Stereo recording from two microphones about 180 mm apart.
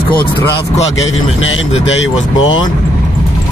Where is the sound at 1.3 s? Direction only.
90° left.